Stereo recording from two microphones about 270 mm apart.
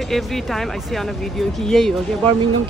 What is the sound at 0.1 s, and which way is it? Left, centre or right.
Speech, centre.